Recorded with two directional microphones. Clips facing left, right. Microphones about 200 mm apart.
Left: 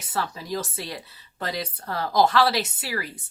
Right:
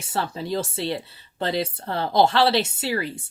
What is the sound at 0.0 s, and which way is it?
Speech, 30° right (ahead or behind).